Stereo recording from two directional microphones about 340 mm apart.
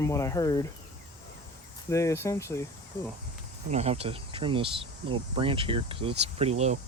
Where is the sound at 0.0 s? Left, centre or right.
Centre.